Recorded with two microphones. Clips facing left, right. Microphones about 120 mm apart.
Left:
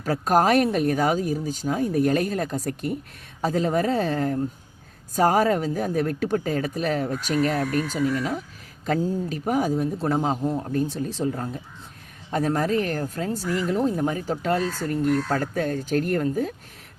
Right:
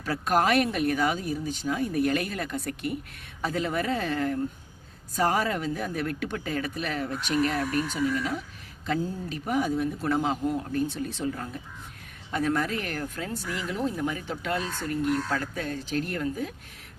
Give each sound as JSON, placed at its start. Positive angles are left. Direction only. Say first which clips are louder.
{"t": 0.0, "sound": "speech", "louder": "left 4 dB", "side_deg": 40}